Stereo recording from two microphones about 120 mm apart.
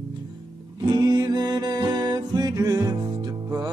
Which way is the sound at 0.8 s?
35° right (ahead or behind).